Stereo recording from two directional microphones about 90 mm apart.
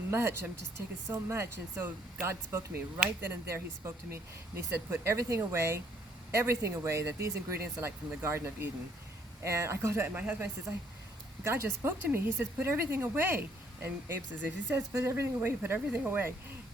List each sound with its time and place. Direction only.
0.1 s speech: 25° right (ahead or behind)